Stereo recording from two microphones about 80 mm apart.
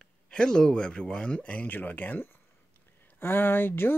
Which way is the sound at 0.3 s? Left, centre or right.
Centre.